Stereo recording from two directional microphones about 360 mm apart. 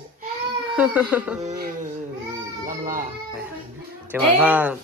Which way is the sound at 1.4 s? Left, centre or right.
Right.